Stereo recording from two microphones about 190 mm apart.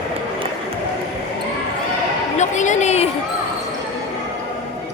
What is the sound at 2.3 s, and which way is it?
Speech, 40° left (ahead or behind).